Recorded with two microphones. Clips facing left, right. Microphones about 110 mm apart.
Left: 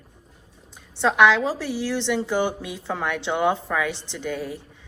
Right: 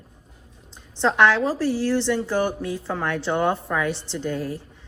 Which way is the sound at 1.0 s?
15° left (ahead or behind).